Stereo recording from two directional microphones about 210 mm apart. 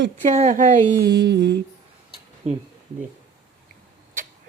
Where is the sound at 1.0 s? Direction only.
55° right (ahead or behind).